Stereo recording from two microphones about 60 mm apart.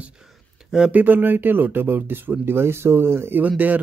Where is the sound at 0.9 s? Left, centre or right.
Right.